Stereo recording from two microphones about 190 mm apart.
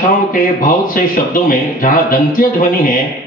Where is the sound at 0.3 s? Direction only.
45° left (ahead or behind).